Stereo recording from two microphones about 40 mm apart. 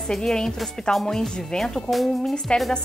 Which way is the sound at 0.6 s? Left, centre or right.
Centre.